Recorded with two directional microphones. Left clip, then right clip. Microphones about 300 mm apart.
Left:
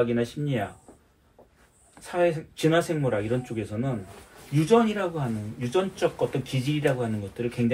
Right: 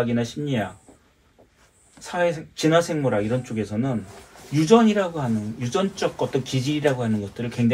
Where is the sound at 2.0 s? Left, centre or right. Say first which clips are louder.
Right 1 dB; right.